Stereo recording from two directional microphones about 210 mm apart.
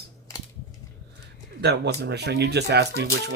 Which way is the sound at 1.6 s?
50° right (ahead or behind).